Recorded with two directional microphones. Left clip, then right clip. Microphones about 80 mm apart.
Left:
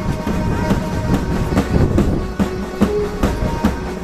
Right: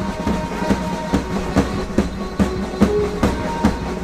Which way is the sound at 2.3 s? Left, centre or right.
Left.